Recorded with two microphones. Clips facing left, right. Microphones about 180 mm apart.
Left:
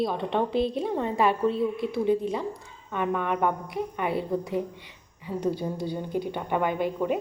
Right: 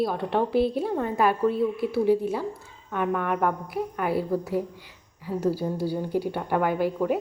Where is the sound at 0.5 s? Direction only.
20° left (ahead or behind).